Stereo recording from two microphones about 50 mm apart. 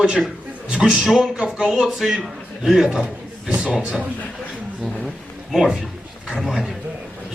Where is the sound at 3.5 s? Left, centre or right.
Centre.